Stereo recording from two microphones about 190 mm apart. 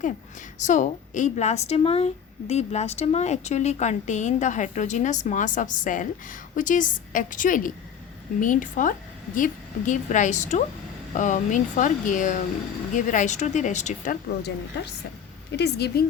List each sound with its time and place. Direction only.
0.6 s a woman's voice: 40° left (ahead or behind)
14.4 s speech: 60° left (ahead or behind)